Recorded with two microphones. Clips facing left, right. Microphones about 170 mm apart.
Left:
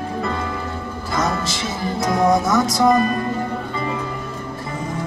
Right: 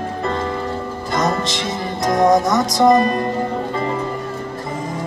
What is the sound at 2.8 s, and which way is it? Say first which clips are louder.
Music: right 5 dB; 45° right (ahead or behind).